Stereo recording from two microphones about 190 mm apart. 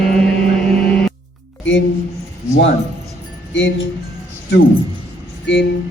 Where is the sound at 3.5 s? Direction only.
75° left (ahead or behind).